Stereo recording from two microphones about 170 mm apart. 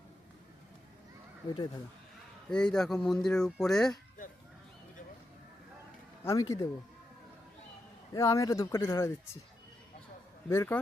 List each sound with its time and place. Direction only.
2.5 s speech: 5° left (ahead or behind)
4.2 s music: 50° left (ahead or behind)
6.2 s speech: 20° left (ahead or behind)
8.1 s speech: 20° left (ahead or behind)
10.5 s speech: 15° left (ahead or behind)